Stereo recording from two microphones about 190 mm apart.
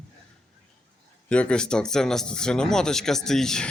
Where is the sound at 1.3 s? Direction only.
5° left (ahead or behind).